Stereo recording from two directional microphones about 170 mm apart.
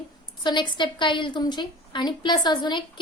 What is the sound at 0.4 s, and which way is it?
A woman's voice, 25° left (ahead or behind).